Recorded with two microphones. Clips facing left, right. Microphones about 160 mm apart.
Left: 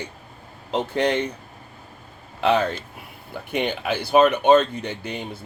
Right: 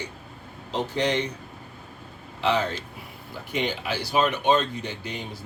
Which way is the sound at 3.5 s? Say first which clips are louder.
Left 4 dB; 60° left (ahead or behind).